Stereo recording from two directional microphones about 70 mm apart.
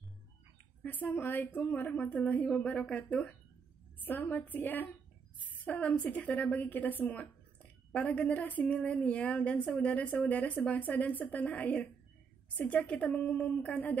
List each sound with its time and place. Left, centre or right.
0.8 s a woman's voice: left